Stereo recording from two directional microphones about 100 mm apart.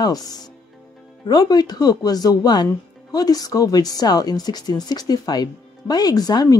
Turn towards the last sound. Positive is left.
turn(degrees=40)  # may be behind; listen again after turning